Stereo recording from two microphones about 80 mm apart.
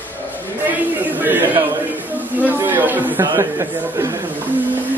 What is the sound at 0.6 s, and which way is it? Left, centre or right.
Speech, right.